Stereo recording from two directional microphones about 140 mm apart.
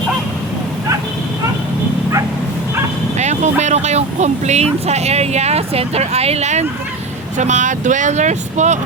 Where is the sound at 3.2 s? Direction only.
55° right (ahead or behind).